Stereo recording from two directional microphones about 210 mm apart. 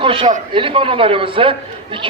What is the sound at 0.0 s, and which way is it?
A man's voice, 25° right (ahead or behind).